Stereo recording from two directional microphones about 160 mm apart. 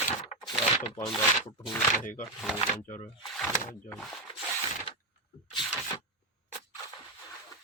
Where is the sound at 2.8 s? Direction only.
50° left (ahead or behind).